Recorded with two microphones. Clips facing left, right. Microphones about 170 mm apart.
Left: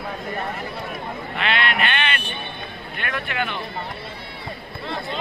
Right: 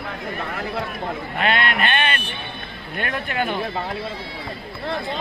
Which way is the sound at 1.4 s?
45° right (ahead or behind).